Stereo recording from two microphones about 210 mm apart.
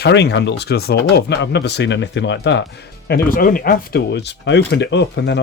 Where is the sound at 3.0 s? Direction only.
45° left (ahead or behind).